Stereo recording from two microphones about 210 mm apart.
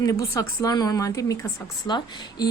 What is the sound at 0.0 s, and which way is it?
Speech, 15° left (ahead or behind).